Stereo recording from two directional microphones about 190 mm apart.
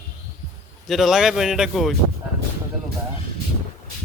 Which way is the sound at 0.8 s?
Centre (ahead or behind).